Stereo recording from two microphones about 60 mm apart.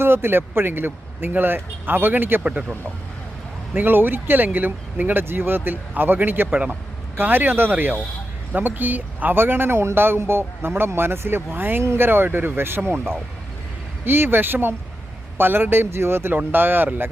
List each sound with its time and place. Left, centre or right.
0.0 s speech: right
2.4 s speech: centre
3.8 s speech: right
16.3 s speech: right